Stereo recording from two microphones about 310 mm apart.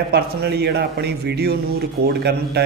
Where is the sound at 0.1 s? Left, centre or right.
Right.